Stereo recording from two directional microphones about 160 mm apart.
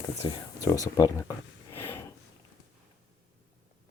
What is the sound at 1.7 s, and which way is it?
Snort, 15° left (ahead or behind).